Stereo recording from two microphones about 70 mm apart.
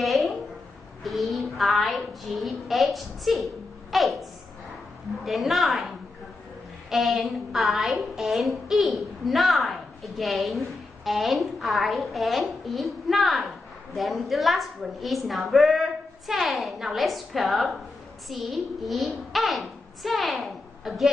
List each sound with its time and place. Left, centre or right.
0.0 s a sound: centre
1.0 s child singing: centre
3.9 s a woman's voice: centre